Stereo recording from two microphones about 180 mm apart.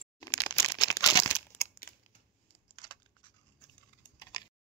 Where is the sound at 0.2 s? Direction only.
20° left (ahead or behind).